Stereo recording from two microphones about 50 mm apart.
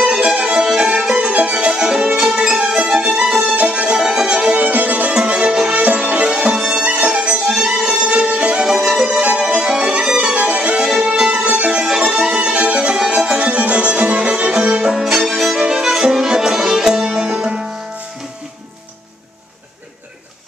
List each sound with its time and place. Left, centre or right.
0.2 s music: right
3.5 s music: right
3.9 s violin: centre
4.6 s music: right
5.1 s music: centre
8.6 s music: centre
9.2 s music: right
10.0 s violin: centre
10.3 s music: right
10.8 s music: centre
12.9 s music: centre
15.2 s music: centre